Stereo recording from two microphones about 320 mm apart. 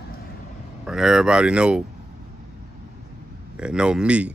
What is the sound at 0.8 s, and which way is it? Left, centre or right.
Speech, centre.